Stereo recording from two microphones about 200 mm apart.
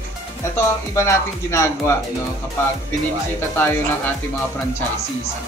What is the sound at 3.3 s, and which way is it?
Speech, 10° left (ahead or behind).